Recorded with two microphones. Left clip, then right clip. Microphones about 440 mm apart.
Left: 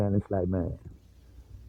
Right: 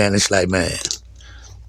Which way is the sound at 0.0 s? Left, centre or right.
Left.